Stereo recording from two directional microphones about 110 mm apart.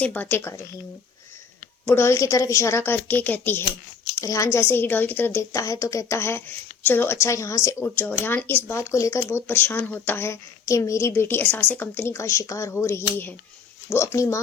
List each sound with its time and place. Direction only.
0.0 s speech: 15° left (ahead or behind)
1.8 s speech: 20° left (ahead or behind)
4.2 s speech: 30° left (ahead or behind)
7.9 s speech: 15° left (ahead or behind)